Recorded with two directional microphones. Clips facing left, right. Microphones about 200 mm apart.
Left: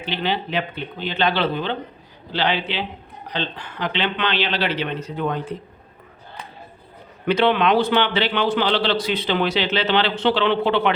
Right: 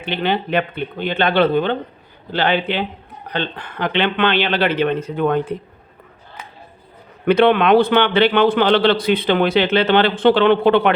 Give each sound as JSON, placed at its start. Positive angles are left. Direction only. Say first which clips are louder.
{"t": 0.0, "sound": "a man's voice", "louder": "right 4 dB", "side_deg": -55}
{"t": 7.3, "sound": "a man's voice", "louder": "right 5 dB", "side_deg": -55}